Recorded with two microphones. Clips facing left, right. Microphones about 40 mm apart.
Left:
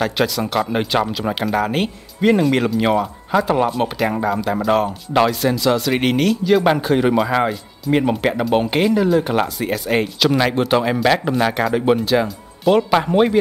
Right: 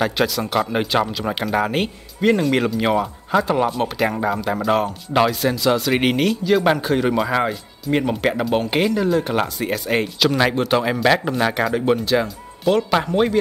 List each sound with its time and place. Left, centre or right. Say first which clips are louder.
0.0 s speech: left 1 dB; centre